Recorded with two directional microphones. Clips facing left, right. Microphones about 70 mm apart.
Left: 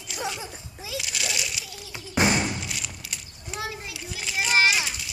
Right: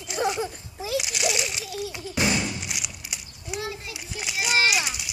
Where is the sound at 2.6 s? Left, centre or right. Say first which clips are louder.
Even; centre.